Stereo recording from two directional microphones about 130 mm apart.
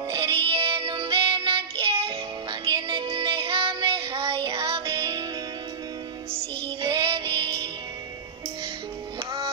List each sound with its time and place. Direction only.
0.1 s music: 40° right (ahead or behind)
6.3 s music: 40° right (ahead or behind)